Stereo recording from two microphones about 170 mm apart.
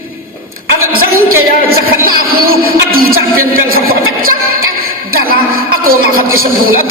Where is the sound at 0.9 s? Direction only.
60° right (ahead or behind).